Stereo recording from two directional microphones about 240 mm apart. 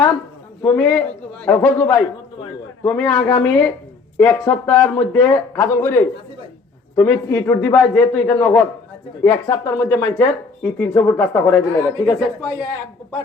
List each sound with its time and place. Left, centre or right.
0.6 s speech: centre
3.2 s speech: left
3.4 s speech: centre